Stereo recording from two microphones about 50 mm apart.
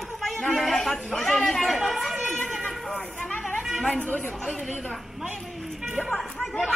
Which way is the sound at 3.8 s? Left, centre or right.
Left.